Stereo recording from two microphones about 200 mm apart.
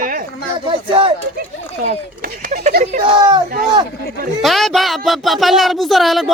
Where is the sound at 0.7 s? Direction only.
25° right (ahead or behind).